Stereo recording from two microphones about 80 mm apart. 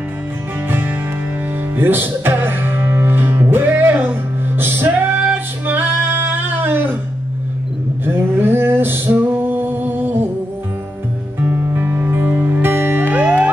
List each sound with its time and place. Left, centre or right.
0.7 s music: right
8.0 s a sound: right
11.3 s music: right